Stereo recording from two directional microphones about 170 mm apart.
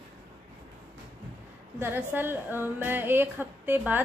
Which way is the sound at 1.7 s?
15° right (ahead or behind).